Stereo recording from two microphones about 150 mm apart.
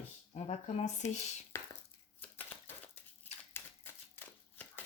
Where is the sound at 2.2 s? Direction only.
15° left (ahead or behind).